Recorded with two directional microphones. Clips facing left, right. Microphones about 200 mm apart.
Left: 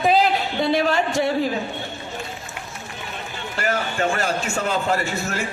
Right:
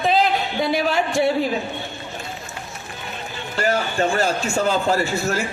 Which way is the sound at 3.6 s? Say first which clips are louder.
Right 3 dB; 30° right (ahead or behind).